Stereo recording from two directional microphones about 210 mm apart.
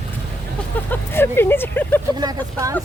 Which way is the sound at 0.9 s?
10° left (ahead or behind).